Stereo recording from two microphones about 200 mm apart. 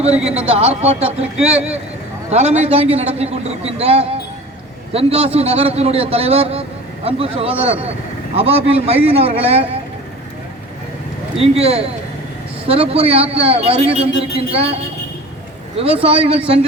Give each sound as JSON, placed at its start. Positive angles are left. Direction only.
{"t": 0.1, "sound": "speech", "side_deg": -5}
{"t": 0.3, "sound": "a man's voice", "side_deg": -30}
{"t": 11.3, "sound": "a man's voice", "side_deg": -30}
{"t": 15.8, "sound": "a man's voice", "side_deg": -30}